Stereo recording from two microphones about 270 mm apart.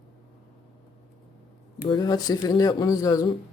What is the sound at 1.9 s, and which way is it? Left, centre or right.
Speech, centre.